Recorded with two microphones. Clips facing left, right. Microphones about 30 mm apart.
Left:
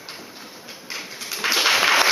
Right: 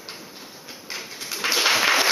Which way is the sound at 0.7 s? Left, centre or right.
Centre.